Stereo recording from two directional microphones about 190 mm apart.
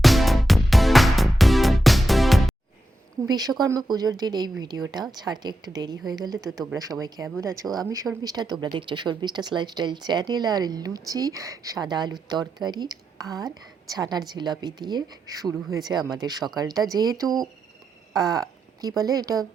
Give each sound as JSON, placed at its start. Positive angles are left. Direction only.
{"t": 0.0, "sound": "music", "side_deg": 0}
{"t": 3.2, "sound": "a woman's voice", "side_deg": -20}